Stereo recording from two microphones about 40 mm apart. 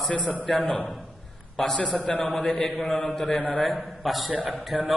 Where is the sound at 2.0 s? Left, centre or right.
Left.